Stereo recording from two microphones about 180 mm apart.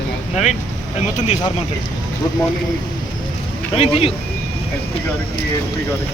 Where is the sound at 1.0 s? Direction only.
40° left (ahead or behind).